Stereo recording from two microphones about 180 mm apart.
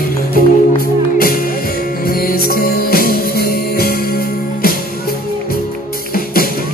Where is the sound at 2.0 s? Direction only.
55° left (ahead or behind).